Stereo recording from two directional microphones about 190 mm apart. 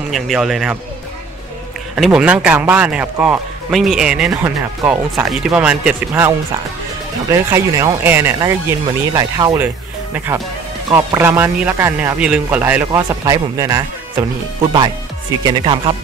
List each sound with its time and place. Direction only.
0.1 s a man's voice: centre (ahead or behind)
2.0 s a man's voice: centre (ahead or behind)
15.4 s speech: 25° right (ahead or behind)